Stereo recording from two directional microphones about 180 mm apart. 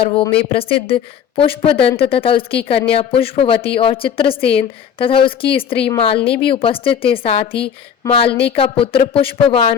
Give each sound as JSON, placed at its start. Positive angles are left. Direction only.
{"t": 0.0, "sound": "a woman's voice", "side_deg": 30}